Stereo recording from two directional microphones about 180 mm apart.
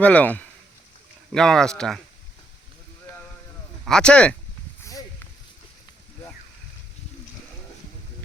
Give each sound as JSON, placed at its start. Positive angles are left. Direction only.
{"t": 0.0, "sound": "speech", "side_deg": 10}
{"t": 3.8, "sound": "speech", "side_deg": 5}
{"t": 4.8, "sound": "a sound", "side_deg": 20}